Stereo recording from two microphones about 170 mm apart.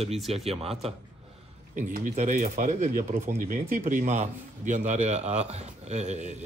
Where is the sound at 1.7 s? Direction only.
50° right (ahead or behind).